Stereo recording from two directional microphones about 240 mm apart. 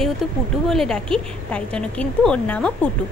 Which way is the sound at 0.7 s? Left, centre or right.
Centre.